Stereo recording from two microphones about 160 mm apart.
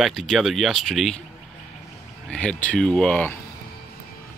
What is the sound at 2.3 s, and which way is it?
Speech, 5° left (ahead or behind).